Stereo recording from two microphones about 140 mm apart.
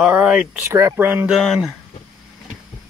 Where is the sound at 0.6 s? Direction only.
20° right (ahead or behind).